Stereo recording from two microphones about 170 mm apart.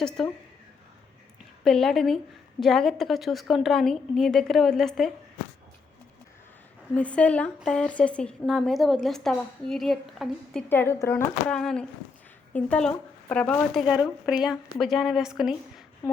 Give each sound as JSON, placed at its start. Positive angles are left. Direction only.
{"t": 0.2, "sound": "a woman's voice", "side_deg": 5}
{"t": 1.6, "sound": "a woman's voice", "side_deg": 0}
{"t": 6.9, "sound": "a woman's voice", "side_deg": 5}
{"t": 10.7, "sound": "a woman's voice", "side_deg": 15}
{"t": 13.8, "sound": "a woman's voice", "side_deg": -5}